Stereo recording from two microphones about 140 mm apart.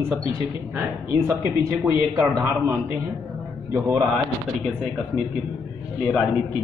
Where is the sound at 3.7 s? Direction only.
20° right (ahead or behind).